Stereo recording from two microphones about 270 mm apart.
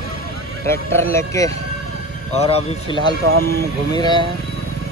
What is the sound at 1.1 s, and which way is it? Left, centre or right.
Speech, centre.